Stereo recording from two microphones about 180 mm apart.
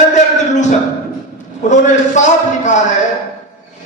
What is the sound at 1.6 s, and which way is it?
A man's voice, 40° left (ahead or behind).